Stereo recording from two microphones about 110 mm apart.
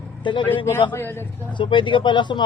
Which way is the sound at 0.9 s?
20° left (ahead or behind).